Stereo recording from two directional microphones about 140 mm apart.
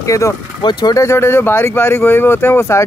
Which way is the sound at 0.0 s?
20° left (ahead or behind).